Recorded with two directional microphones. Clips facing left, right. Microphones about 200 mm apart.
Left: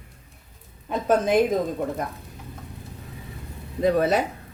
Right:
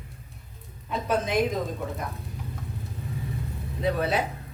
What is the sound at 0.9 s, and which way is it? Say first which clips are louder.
Speech: left 5 dB; 45° left (ahead or behind).